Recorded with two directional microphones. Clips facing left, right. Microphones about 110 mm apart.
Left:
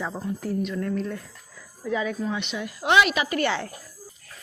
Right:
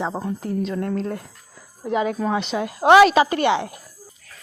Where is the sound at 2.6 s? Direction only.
90° right.